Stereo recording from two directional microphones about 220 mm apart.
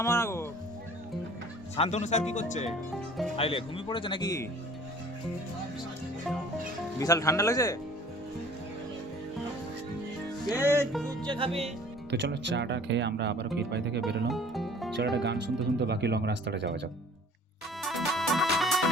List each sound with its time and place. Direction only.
0.0 s speech: 10° left (ahead or behind)
1.7 s speech: 30° left (ahead or behind)
2.6 s speech: centre (ahead or behind)
3.3 s speech: 25° left (ahead or behind)
7.0 s speech: 15° left (ahead or behind)
10.6 s music: 10° right (ahead or behind)
12.1 s speech: 50° right (ahead or behind)
14.3 s music: centre (ahead or behind)
14.9 s speech: 50° right (ahead or behind)
17.8 s music: centre (ahead or behind)